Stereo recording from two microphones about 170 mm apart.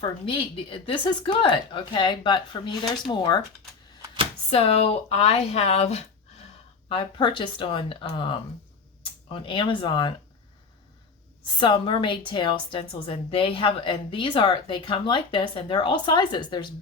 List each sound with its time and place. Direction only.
0.0 s a woman's voice: 30° left (ahead or behind)
4.0 s a sound: 30° right (ahead or behind)
4.5 s a woman's voice: 35° left (ahead or behind)
11.6 s a woman's voice: 30° left (ahead or behind)